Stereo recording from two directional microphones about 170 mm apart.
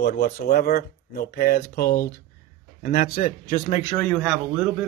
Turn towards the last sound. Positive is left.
turn(degrees=-5)  # may be behind; listen again after turning